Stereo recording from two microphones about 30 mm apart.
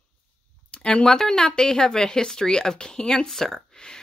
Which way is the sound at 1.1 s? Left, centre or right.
Centre.